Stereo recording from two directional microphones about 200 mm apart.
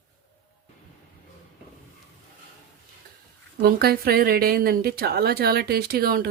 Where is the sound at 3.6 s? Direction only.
50° right (ahead or behind).